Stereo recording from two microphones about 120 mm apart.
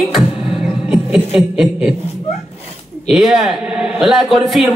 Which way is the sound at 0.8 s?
10° right (ahead or behind).